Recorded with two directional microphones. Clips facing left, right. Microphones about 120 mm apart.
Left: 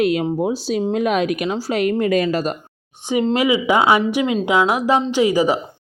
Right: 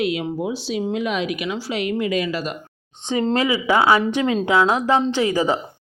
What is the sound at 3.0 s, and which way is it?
A woman's voice, 15° left (ahead or behind).